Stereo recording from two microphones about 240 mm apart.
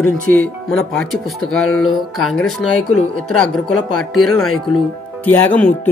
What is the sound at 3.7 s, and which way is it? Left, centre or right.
Speech, left.